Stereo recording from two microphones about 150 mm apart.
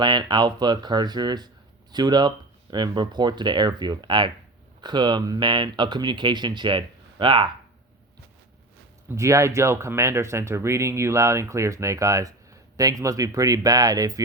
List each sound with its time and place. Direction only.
0.0 s speech: 30° right (ahead or behind)
9.1 s speech: 20° right (ahead or behind)